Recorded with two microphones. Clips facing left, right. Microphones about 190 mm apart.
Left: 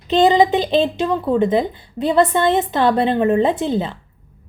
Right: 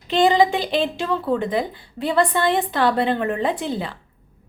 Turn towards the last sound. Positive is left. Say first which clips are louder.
# left 5 dB
turn(degrees=20)  # may be behind; listen again after turning